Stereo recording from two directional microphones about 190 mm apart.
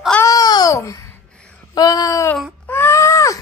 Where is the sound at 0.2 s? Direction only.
20° left (ahead or behind).